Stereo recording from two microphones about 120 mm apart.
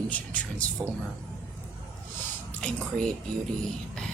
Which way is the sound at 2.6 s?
10° left (ahead or behind).